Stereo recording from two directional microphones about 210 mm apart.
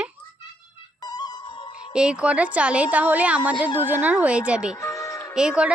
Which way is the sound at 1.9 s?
5° right (ahead or behind).